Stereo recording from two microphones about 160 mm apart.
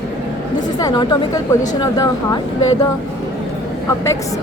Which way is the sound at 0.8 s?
25° left (ahead or behind).